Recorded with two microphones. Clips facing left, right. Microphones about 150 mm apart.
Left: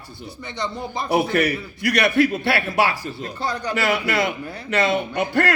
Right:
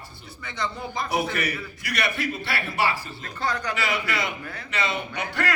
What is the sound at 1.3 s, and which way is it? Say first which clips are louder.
A man's voice: left 8 dB; 65° left (ahead or behind).